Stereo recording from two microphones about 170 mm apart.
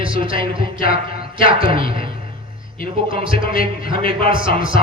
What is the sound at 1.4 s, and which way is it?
Speech, 55° left (ahead or behind).